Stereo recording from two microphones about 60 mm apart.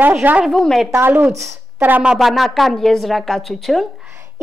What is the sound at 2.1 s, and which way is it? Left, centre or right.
Speech, centre.